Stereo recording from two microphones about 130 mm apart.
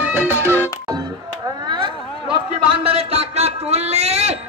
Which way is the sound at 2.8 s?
50° right (ahead or behind).